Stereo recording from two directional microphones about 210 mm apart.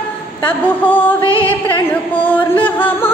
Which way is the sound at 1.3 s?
25° left (ahead or behind).